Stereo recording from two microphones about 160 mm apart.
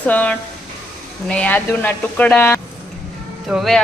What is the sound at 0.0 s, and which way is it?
Speech, 10° left (ahead or behind).